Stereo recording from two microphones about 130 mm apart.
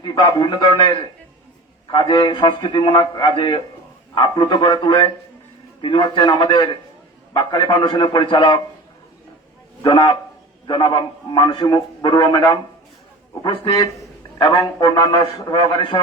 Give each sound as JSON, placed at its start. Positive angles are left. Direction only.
{"t": 0.0, "sound": "a man's voice", "side_deg": 35}
{"t": 9.8, "sound": "a man's voice", "side_deg": 35}
{"t": 14.3, "sound": "a man's voice", "side_deg": 35}